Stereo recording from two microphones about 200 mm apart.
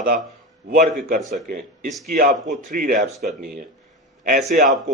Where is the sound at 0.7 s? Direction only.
45° right (ahead or behind).